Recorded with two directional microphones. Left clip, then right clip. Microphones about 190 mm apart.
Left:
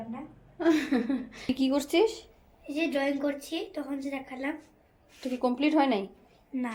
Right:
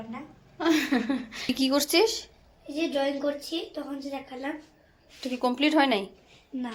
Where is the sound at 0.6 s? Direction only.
Centre (ahead or behind).